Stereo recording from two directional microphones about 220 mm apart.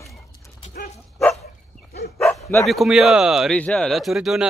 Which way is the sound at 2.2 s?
Centre (ahead or behind).